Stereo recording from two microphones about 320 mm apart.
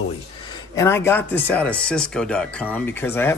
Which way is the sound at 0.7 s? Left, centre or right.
Centre.